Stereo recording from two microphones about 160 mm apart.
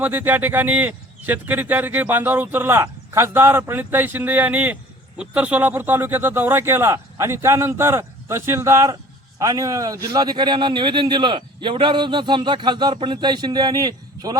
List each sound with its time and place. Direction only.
0.0 s a man's voice: 10° right (ahead or behind)